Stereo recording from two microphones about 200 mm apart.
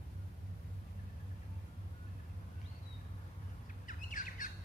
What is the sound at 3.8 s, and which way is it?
Squawk, 40° left (ahead or behind).